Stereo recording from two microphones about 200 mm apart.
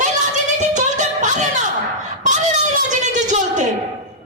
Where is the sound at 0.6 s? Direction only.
35° right (ahead or behind).